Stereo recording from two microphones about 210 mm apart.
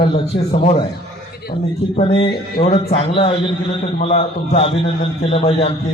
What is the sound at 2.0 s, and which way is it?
A man's voice, 25° left (ahead or behind).